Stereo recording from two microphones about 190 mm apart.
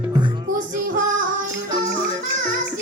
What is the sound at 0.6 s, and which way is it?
Child singing, 45° right (ahead or behind).